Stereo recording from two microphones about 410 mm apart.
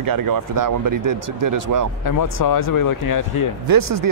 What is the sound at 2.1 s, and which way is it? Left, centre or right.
Speech, left.